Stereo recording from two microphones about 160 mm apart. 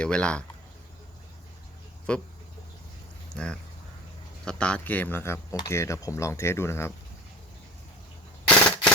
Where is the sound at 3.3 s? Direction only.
5° left (ahead or behind).